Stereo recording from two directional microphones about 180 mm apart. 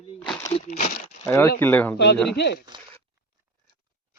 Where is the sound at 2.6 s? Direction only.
25° right (ahead or behind).